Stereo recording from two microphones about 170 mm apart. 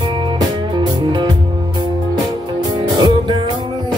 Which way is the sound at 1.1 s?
25° right (ahead or behind).